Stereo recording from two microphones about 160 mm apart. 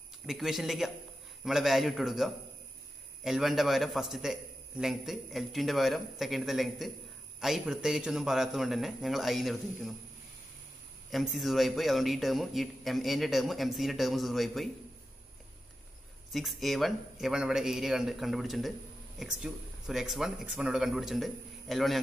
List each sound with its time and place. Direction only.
0.3 s a man's voice: centre (ahead or behind)
11.1 s a man's voice: centre (ahead or behind)
16.3 s a man's voice: centre (ahead or behind)